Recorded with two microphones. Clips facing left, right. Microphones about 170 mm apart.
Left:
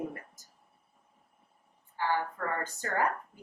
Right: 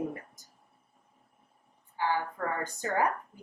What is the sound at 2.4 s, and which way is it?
Speech, 10° right (ahead or behind).